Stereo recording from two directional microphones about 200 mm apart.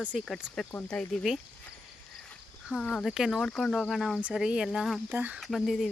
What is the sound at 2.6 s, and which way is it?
Speech, centre (ahead or behind).